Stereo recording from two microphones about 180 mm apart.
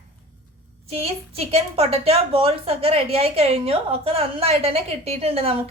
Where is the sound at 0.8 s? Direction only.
35° right (ahead or behind).